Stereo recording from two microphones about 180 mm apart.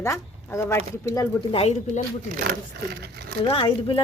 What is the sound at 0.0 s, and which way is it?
Speech, 15° left (ahead or behind).